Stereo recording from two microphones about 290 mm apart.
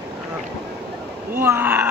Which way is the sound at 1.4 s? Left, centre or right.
Centre.